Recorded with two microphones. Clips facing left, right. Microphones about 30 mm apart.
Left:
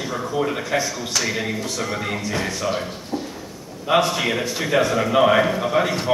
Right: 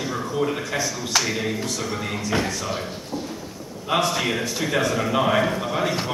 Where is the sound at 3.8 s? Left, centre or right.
Centre.